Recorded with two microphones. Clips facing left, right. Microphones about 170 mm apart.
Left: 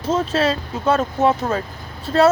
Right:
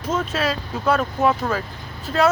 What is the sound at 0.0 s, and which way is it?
Speech, 30° left (ahead or behind).